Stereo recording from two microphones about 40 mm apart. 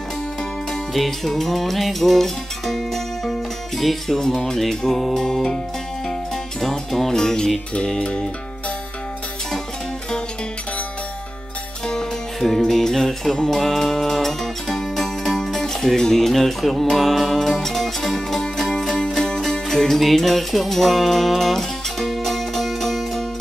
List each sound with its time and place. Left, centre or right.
0.9 s music: centre
6.6 s music: centre
8.0 s music: left
12.4 s music: centre
18.9 s music: left
19.1 s music: centre